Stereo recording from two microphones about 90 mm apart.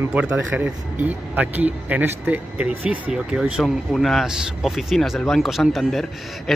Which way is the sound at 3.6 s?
5° left (ahead or behind).